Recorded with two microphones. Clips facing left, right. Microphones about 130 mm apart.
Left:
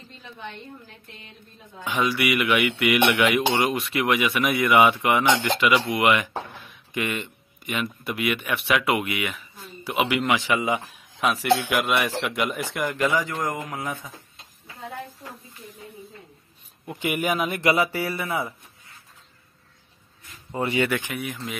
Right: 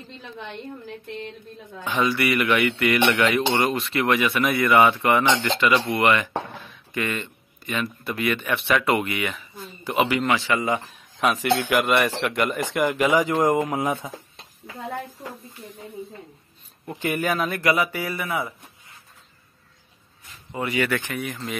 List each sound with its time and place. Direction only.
1.9 s speech: 10° left (ahead or behind)
11.1 s a man's voice: centre (ahead or behind)
13.0 s speech: 15° right (ahead or behind)
17.0 s speech: 15° left (ahead or behind)
20.5 s speech: 25° left (ahead or behind)
21.0 s speech: 5° left (ahead or behind)